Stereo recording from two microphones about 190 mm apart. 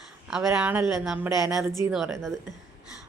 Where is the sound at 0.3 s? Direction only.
5° right (ahead or behind).